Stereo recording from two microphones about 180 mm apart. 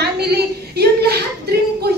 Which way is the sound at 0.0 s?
65° right (ahead or behind).